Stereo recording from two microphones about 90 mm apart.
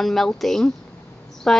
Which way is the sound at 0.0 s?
5° left (ahead or behind).